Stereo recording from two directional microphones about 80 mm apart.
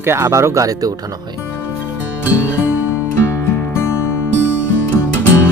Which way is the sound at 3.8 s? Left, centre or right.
Left.